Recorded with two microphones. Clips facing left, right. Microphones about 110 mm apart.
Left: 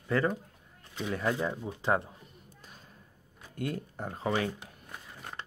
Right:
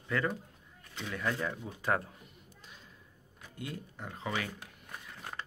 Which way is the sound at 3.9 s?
40° left (ahead or behind).